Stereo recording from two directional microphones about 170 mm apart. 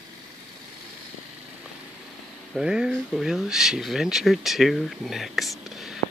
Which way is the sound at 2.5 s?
5° right (ahead or behind).